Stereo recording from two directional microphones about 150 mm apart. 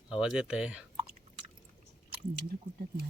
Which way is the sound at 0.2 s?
5° right (ahead or behind).